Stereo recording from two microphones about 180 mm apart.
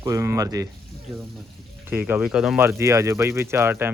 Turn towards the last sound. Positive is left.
turn(degrees=-15)  # may be behind; listen again after turning